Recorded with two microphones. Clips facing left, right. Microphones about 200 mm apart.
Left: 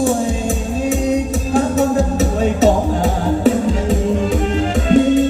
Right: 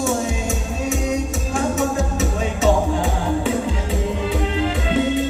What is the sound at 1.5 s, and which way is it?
Music, 35° left (ahead or behind).